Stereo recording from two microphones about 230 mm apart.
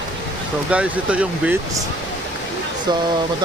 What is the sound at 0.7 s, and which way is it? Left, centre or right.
Speech, centre.